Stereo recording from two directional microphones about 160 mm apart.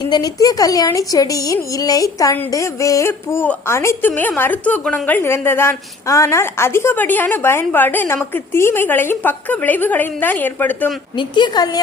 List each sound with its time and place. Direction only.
0.0 s speech: 25° left (ahead or behind)
11.2 s a woman's voice: 30° left (ahead or behind)